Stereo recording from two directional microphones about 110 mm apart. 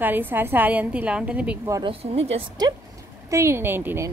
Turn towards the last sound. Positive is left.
turn(degrees=-20)  # may be behind; listen again after turning